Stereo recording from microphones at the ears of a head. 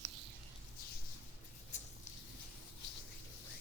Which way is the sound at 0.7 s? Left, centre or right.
Left.